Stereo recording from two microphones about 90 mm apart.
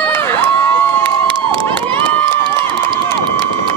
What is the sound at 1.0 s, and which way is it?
Crowd, 65° right (ahead or behind).